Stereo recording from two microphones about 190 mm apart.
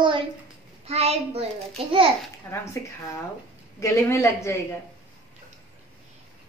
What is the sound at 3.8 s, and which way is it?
Speech, 15° left (ahead or behind).